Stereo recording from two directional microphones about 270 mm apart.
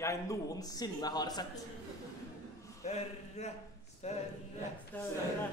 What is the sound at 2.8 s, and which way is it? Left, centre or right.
A man's voice, left.